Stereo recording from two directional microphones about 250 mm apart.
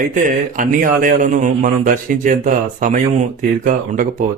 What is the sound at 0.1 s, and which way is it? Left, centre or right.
A man's voice, right.